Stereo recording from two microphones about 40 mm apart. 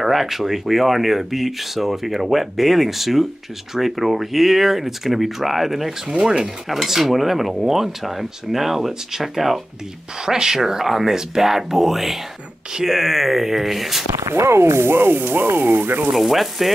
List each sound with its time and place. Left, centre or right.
0.0 s dishes: centre
10.2 s speech: centre
12.7 s dishes: centre
14.3 s speech: right
16.1 s dishes: centre